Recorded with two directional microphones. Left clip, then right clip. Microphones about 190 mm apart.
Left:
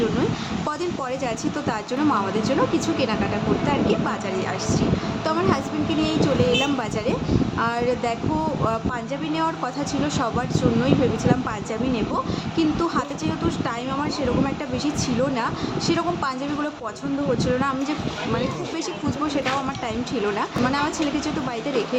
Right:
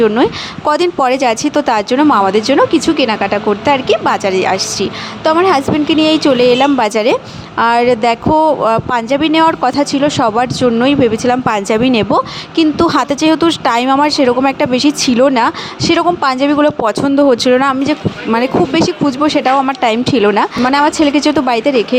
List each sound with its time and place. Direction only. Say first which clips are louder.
0.7 s speech: right 17 dB; 55° right (ahead or behind)